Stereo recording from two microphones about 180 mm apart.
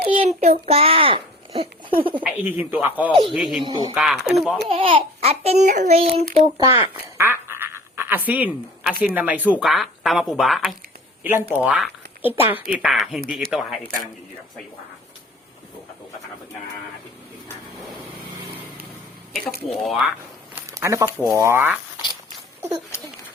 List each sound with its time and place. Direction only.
0.0 s child singing: 30° right (ahead or behind)
0.3 s a child's voice: 40° right (ahead or behind)
2.2 s speech: 10° right (ahead or behind)
3.6 s speech: 25° right (ahead or behind)
3.9 s speech: centre (ahead or behind)
4.7 s a child's voice: 30° right (ahead or behind)
6.6 s speech: 15° right (ahead or behind)
7.2 s quack: 15° right (ahead or behind)
8.9 s speech: 10° right (ahead or behind)
11.2 s speech: 10° right (ahead or behind)
19.8 s speech: centre (ahead or behind)
20.6 s a sound: 15° right (ahead or behind)
21.2 s speech: 15° right (ahead or behind)
22.9 s speech: 15° left (ahead or behind)